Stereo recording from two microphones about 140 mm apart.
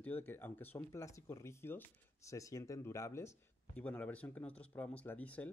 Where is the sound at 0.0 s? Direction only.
15° left (ahead or behind).